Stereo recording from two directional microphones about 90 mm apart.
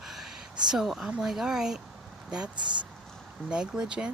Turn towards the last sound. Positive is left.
turn(degrees=-10)  # may be behind; listen again after turning